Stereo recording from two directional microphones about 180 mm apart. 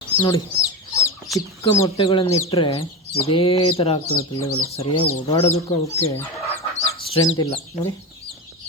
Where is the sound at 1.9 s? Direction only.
30° left (ahead or behind).